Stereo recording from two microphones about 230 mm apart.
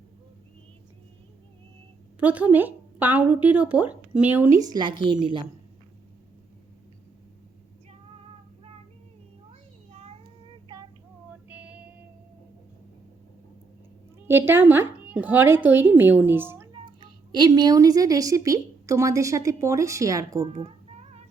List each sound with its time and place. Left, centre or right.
2.1 s speech: centre
4.6 s a woman's voice: centre
10.7 s female singing: centre
11.4 s female singing: centre
14.2 s a woman's voice: centre
20.5 s cat: right